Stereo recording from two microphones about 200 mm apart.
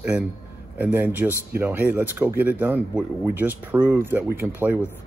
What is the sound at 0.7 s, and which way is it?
Speech, 10° right (ahead or behind).